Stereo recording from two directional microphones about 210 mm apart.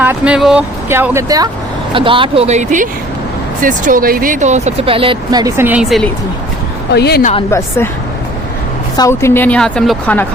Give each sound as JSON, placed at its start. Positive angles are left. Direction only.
{"t": 0.0, "sound": "speech", "side_deg": -5}
{"t": 6.9, "sound": "a woman's voice", "side_deg": 50}
{"t": 9.0, "sound": "a woman's voice", "side_deg": 15}